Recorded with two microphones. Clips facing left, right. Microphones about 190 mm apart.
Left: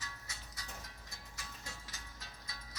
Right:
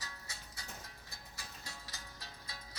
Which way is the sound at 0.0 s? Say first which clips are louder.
Right 1 dB; 30° right (ahead or behind).